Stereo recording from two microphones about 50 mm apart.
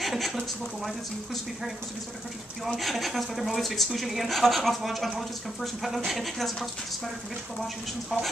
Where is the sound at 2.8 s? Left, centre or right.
Centre.